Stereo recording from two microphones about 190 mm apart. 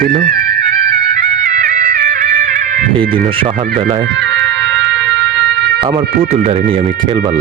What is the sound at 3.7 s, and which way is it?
Speech, 40° right (ahead or behind).